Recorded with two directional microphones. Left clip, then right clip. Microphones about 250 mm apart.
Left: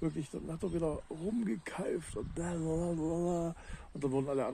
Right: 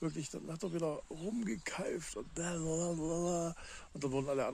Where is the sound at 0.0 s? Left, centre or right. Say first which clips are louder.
Left 3 dB; centre.